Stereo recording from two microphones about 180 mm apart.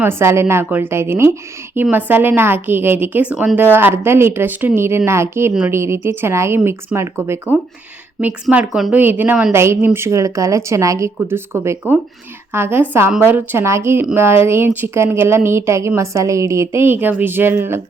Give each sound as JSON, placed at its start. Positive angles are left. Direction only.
{"t": 0.0, "sound": "a woman's voice", "side_deg": -15}